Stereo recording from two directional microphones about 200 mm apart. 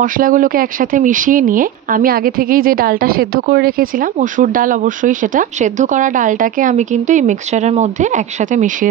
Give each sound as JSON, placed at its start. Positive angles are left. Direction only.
{"t": 0.0, "sound": "speech", "side_deg": -40}